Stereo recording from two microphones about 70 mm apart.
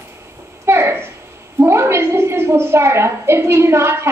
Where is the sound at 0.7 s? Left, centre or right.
Right.